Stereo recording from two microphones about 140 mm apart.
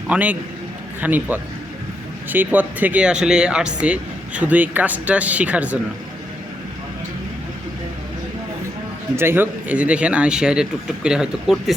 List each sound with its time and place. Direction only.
0.1 s speech: 10° right (ahead or behind)
9.1 s speech: 15° right (ahead or behind)